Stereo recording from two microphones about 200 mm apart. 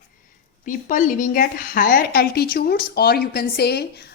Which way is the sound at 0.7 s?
40° left (ahead or behind).